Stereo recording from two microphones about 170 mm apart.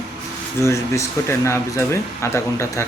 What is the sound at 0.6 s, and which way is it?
Speech, 15° left (ahead or behind).